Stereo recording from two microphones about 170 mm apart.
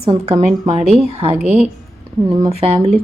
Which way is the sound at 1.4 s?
5° right (ahead or behind).